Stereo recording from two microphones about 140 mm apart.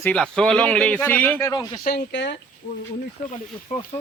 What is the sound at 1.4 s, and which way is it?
Speech, 30° left (ahead or behind).